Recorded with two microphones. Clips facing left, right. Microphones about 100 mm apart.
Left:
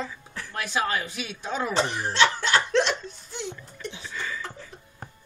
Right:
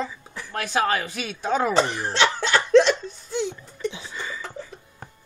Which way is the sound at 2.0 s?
90° right.